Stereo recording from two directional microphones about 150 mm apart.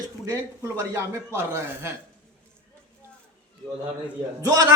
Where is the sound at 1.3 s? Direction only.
15° right (ahead or behind).